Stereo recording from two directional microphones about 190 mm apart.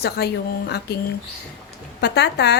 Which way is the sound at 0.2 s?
55° left (ahead or behind).